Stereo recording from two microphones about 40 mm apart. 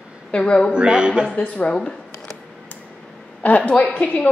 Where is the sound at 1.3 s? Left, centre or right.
Left.